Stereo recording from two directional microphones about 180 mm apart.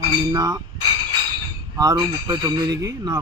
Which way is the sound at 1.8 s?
20° right (ahead or behind).